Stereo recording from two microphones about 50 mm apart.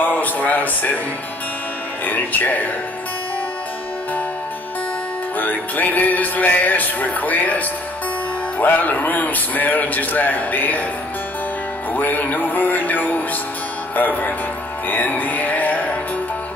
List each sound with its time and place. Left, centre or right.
0.0 s speech: left
2.0 s music: left
5.4 s music: left
11.9 s music: left